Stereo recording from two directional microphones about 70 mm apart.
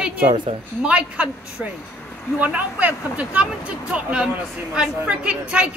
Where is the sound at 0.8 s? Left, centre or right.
Centre.